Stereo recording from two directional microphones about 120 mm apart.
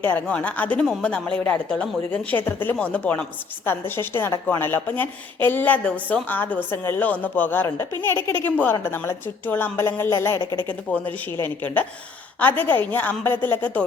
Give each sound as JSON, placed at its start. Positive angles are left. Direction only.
{"t": 0.0, "sound": "a woman's voice", "side_deg": 15}